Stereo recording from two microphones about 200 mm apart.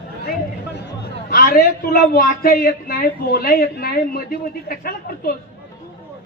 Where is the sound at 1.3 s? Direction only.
50° left (ahead or behind).